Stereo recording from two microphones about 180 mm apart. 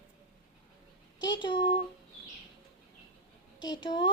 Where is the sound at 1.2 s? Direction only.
25° left (ahead or behind).